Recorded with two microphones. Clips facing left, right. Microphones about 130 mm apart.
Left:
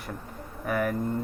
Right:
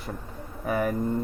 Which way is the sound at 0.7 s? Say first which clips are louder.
Right 1 dB; 25° right (ahead or behind).